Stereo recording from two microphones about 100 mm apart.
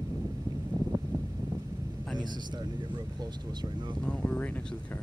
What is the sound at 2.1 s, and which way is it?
Speech, 45° right (ahead or behind).